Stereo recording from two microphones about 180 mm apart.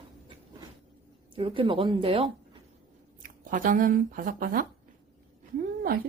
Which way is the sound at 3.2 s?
50° right (ahead or behind).